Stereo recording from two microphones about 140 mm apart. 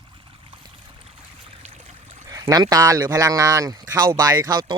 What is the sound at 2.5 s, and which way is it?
Speech, 25° right (ahead or behind).